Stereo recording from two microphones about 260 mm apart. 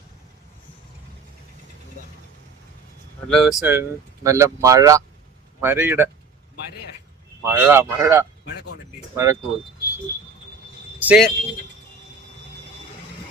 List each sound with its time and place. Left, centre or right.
3.2 s speech: centre
3.6 s speech: centre
7.4 s speech: centre
8.4 s speech: left
9.1 s speech: centre
11.0 s a man's voice: centre